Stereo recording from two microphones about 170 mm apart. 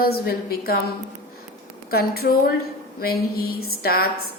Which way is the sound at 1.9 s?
65° left (ahead or behind).